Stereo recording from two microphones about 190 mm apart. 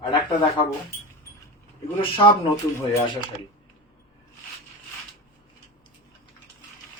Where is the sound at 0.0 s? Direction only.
25° left (ahead or behind).